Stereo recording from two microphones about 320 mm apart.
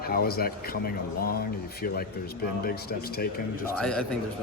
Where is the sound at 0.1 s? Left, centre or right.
Left.